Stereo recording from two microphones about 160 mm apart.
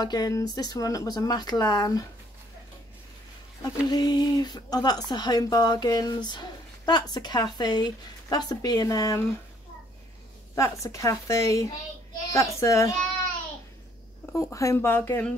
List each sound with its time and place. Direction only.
0.0 s speech: 25° left (ahead or behind)
3.9 s speech: 25° left (ahead or behind)
10.5 s speech: 20° left (ahead or behind)
14.3 s speech: 20° left (ahead or behind)